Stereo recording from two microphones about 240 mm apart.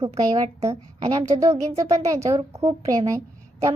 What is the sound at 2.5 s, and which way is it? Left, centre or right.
Speech, right.